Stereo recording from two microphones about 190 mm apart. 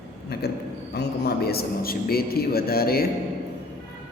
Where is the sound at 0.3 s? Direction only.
55° left (ahead or behind).